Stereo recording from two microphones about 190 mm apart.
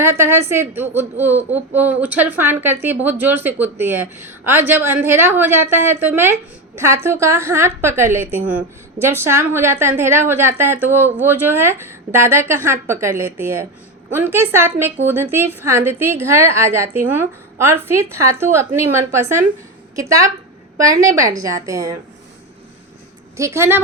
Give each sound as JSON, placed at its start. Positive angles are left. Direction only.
{"t": 0.0, "sound": "a woman's voice", "side_deg": -15}
{"t": 23.4, "sound": "a woman's voice", "side_deg": -15}